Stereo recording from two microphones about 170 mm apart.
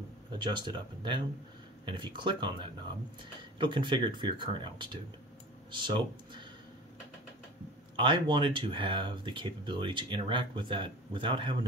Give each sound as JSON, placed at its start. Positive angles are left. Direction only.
{"t": 0.4, "sound": "speech", "side_deg": -25}
{"t": 7.9, "sound": "speech", "side_deg": -30}